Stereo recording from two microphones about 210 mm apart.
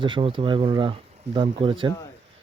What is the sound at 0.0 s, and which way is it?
A man's voice, 25° right (ahead or behind).